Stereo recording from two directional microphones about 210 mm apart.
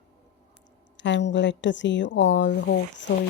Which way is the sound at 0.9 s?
60° left (ahead or behind).